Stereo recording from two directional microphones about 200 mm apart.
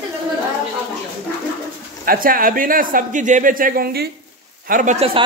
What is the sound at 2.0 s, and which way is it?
Speech, 45° right (ahead or behind).